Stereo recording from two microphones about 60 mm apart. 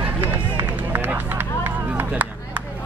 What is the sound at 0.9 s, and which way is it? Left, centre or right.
Run, right.